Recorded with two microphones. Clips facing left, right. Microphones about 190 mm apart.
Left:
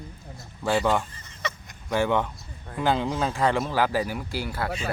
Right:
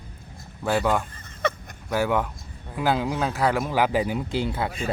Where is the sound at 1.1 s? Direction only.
55° right (ahead or behind).